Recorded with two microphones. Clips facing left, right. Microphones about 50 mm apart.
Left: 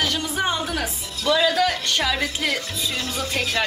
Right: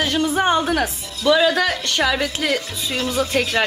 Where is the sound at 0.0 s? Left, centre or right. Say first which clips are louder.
Right 5 dB; right.